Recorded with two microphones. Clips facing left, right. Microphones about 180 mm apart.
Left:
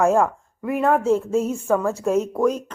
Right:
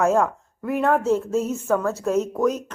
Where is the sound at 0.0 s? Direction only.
Centre (ahead or behind).